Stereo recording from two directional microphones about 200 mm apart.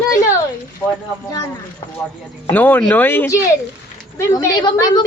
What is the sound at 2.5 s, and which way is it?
Speech, 10° left (ahead or behind).